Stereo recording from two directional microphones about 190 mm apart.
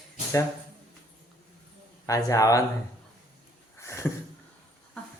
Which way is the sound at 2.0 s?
15° left (ahead or behind).